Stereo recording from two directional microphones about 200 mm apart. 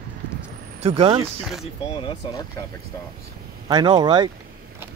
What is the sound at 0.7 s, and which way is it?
Speech, 30° right (ahead or behind).